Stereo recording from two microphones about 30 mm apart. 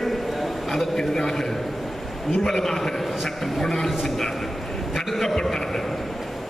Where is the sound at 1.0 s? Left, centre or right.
Centre.